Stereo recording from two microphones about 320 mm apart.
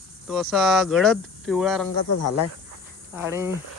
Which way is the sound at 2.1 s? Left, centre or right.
Left.